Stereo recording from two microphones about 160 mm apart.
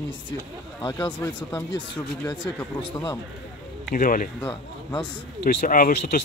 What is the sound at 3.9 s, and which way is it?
Speech, 60° left (ahead or behind).